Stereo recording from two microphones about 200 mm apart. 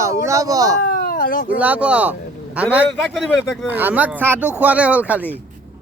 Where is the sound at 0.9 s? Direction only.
45° left (ahead or behind).